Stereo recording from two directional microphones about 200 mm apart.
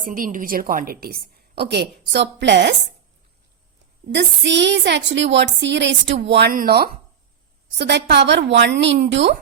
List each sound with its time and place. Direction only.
0.0 s a woman's voice: 45° right (ahead or behind); by 2.7 s 60° right (ahead or behind)
4.1 s a woman's voice: 60° right (ahead or behind)